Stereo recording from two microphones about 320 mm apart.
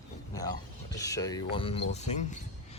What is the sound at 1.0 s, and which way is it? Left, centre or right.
Speech, centre.